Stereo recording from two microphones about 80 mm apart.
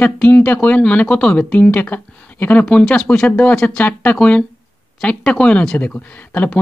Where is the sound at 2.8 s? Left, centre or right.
Centre.